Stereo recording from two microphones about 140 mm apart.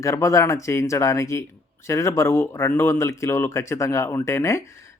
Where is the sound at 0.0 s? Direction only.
20° left (ahead or behind).